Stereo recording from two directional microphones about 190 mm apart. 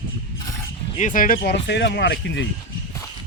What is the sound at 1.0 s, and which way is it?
Speech, 45° left (ahead or behind).